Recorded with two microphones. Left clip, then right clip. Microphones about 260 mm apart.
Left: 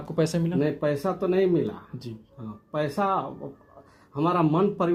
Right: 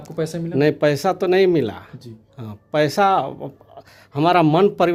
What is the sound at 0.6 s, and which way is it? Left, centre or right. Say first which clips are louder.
A man's voice: right 10 dB; right.